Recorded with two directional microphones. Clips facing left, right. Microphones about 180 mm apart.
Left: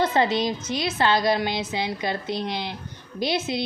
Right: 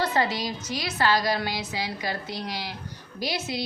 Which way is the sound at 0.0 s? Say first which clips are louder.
Left 4 dB; 20° left (ahead or behind).